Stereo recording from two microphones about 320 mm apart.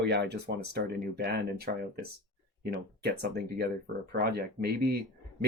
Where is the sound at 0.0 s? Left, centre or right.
Right.